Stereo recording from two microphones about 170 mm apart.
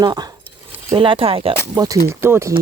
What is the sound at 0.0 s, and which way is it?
Speech, 25° right (ahead or behind).